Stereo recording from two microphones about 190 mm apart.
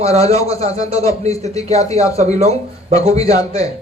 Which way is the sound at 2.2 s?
35° right (ahead or behind).